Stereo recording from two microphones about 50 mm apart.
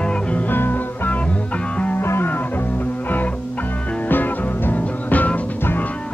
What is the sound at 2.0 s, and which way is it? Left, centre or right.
Music, left.